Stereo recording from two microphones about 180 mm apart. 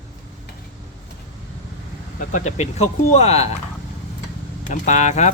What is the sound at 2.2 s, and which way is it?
Speech, 45° left (ahead or behind).